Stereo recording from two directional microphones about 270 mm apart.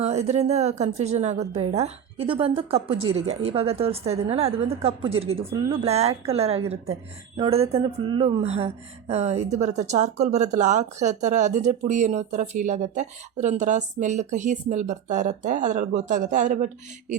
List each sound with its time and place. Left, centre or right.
0.0 s speech: right